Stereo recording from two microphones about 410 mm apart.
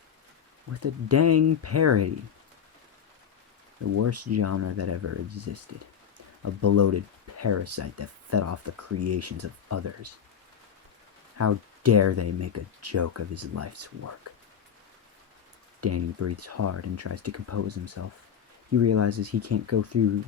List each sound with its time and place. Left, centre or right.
0.7 s speech: right
3.9 s speech: right
6.4 s speech: right
11.3 s speech: right
15.8 s speech: right